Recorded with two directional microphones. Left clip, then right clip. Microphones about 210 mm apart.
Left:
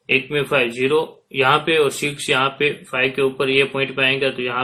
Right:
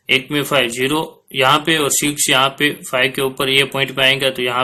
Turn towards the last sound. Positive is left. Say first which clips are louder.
# right 4 dB
turn(degrees=-25)  # may be behind; listen again after turning